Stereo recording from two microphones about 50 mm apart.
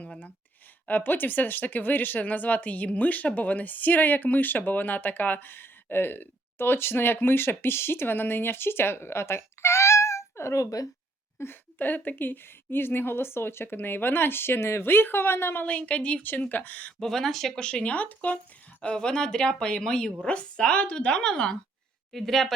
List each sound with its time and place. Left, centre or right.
0.0 s a sound: left
0.9 s speech: left
11.4 s speech: left
11.8 s a woman's voice: left
15.6 s a woman's voice: left
16.5 s speech: left
17.0 s speech: centre
17.9 s speech: left
18.8 s a woman's voice: centre